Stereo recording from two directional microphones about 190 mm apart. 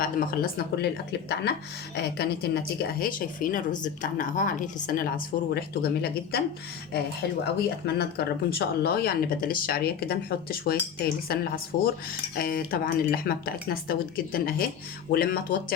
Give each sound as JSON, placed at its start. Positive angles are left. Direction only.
{"t": 0.0, "sound": "speech", "side_deg": 50}